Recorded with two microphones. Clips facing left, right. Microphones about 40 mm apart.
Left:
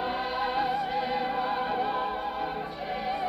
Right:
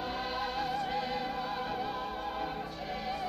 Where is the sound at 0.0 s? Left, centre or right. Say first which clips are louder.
Left 6 dB; centre.